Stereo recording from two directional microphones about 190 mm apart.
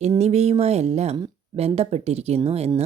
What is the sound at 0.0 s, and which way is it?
A woman's voice, 35° right (ahead or behind).